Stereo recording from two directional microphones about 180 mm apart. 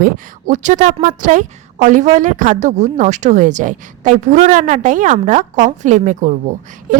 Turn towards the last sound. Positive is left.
turn(degrees=-45)  # may be behind; listen again after turning